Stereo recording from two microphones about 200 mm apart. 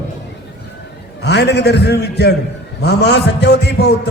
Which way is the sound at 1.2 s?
55° left (ahead or behind).